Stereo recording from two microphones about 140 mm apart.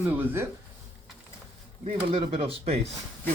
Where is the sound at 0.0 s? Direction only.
15° right (ahead or behind).